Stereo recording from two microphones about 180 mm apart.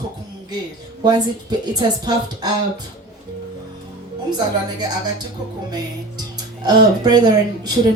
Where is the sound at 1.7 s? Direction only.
25° right (ahead or behind).